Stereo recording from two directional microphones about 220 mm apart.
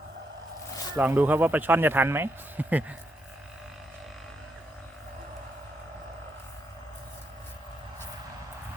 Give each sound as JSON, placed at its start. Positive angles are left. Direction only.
{"t": 0.9, "sound": "speech", "side_deg": -10}